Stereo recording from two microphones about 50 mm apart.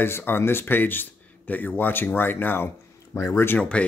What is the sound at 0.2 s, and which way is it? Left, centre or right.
Speech, left.